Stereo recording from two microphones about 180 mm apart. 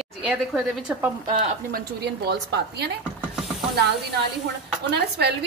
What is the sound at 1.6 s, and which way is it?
A woman's voice, 60° right (ahead or behind).